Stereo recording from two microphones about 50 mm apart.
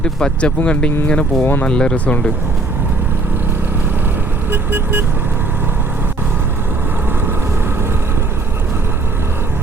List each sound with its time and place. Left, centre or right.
0.0 s speech: centre
1.4 s speech: left
1.6 s speech: centre
4.5 s vehicle: right